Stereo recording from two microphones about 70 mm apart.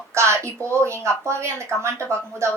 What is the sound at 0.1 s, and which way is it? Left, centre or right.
A child's voice, right.